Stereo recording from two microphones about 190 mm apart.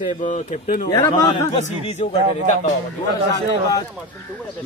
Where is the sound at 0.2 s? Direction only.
40° left (ahead or behind).